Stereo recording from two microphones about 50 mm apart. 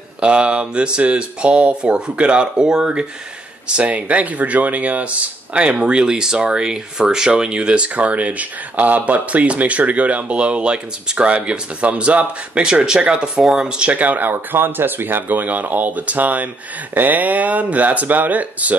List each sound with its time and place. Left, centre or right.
0.2 s speech: right
12.6 s speech: centre
13.9 s speech: right